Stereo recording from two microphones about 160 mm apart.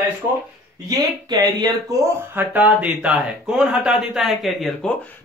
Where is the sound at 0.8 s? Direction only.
25° right (ahead or behind); by 5.1 s 5° left (ahead or behind).